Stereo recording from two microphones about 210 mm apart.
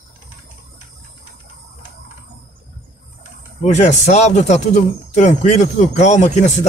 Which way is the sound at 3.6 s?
35° left (ahead or behind).